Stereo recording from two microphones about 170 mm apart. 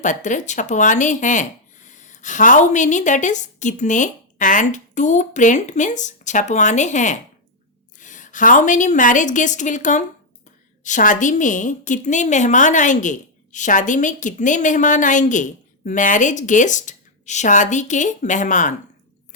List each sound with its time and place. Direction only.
0.0 s a woman's voice: 45° left (ahead or behind)